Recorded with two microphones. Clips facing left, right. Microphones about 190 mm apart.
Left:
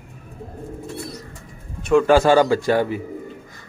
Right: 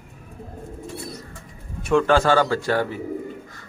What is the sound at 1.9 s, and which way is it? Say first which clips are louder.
A man's voice: left 4 dB; 10° left (ahead or behind).